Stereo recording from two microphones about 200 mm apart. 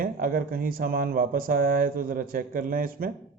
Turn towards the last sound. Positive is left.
turn(degrees=-45)  # may be behind; listen again after turning